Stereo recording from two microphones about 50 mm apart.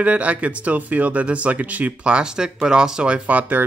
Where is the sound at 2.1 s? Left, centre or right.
Centre.